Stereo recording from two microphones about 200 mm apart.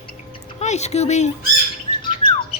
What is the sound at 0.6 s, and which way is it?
Speech, 35° left (ahead or behind).